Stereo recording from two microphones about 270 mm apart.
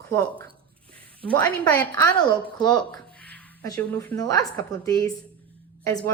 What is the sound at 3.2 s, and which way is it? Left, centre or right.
A woman's voice, centre.